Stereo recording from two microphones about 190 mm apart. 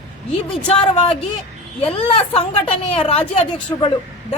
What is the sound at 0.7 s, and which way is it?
A woman's voice, 30° left (ahead or behind).